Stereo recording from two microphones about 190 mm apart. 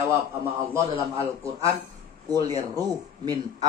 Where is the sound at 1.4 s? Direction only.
15° right (ahead or behind).